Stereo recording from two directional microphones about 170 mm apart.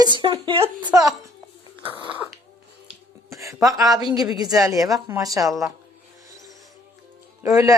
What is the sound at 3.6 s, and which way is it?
Speech, 20° right (ahead or behind).